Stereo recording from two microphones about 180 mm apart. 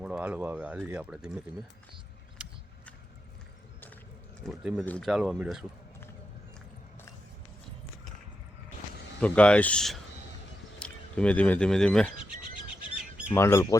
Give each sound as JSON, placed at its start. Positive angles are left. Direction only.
{"t": 0.0, "sound": "speech", "side_deg": -5}
{"t": 2.4, "sound": "a sound", "side_deg": -5}
{"t": 4.4, "sound": "speech", "side_deg": 0}
{"t": 9.2, "sound": "speech", "side_deg": 5}
{"t": 13.3, "sound": "speech", "side_deg": 15}